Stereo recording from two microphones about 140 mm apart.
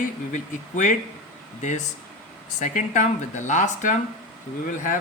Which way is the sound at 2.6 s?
60° left (ahead or behind).